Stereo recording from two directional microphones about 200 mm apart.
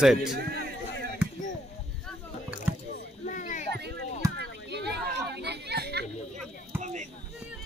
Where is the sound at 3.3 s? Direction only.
40° left (ahead or behind).